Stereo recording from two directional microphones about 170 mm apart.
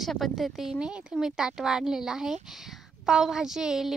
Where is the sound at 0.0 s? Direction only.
Centre (ahead or behind).